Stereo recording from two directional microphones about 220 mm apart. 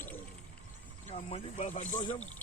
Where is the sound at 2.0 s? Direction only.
20° left (ahead or behind).